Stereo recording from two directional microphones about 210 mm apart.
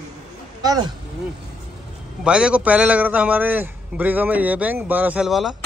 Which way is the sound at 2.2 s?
5° right (ahead or behind).